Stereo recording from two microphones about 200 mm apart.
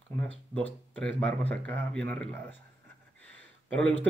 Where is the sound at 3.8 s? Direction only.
10° left (ahead or behind).